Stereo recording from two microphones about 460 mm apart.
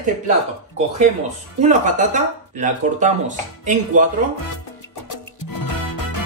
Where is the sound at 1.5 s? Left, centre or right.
Centre.